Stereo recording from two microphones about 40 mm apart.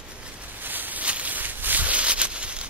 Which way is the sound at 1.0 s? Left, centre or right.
Right.